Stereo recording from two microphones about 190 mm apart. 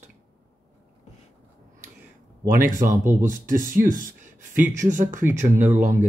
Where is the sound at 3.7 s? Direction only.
45° right (ahead or behind).